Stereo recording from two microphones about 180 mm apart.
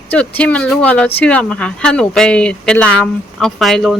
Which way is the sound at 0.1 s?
10° left (ahead or behind).